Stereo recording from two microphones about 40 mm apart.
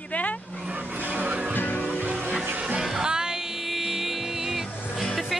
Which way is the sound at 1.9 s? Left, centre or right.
Right.